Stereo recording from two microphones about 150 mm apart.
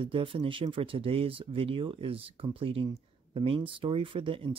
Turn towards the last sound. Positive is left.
turn(degrees=-35)  # may be behind; listen again after turning